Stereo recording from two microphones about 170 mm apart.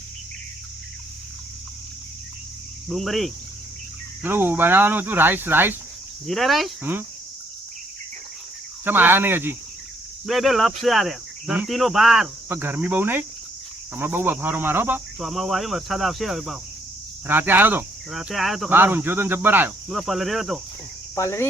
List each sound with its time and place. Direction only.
2.9 s speech: centre (ahead or behind)
4.2 s speech: 10° right (ahead or behind)
6.2 s speech: centre (ahead or behind)
8.8 s speech: 10° right (ahead or behind)
10.2 s speech: centre (ahead or behind)
12.5 s speech: 10° right (ahead or behind)
15.2 s speech: centre (ahead or behind)
17.2 s speech: 10° right (ahead or behind)
18.7 s speech: 10° right (ahead or behind)
19.9 s speech: centre (ahead or behind)
21.2 s cricket: 15° left (ahead or behind)